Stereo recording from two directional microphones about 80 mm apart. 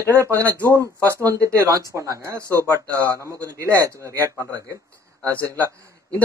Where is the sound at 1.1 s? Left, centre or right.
Right.